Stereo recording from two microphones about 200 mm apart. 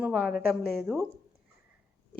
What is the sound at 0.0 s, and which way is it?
Speech, 5° right (ahead or behind).